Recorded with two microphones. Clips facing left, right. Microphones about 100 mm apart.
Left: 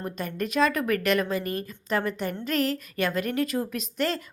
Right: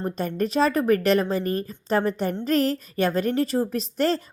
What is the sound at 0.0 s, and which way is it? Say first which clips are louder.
A woman's voice: right 5 dB; 35° right (ahead or behind).